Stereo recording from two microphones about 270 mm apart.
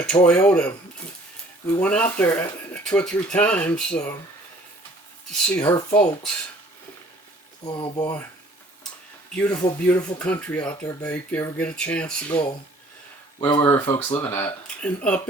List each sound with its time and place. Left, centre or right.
0.0 s speech: centre
5.6 s speech: centre
7.6 s speech: centre
9.3 s speech: centre
13.4 s speech: centre